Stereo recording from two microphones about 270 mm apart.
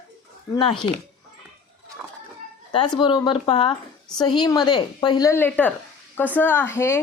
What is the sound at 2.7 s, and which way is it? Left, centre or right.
Speech, centre.